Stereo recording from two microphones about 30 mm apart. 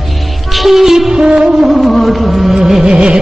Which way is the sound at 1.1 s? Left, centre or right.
Right.